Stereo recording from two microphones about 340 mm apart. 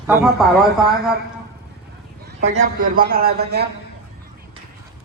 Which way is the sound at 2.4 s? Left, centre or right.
Right.